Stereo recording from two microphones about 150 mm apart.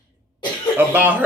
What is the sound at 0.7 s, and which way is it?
Speech, 10° right (ahead or behind).